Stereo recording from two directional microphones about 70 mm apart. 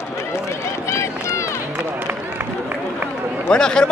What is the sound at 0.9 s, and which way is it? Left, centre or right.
Run, left.